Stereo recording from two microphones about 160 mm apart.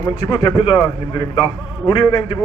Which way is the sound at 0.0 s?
30° left (ahead or behind).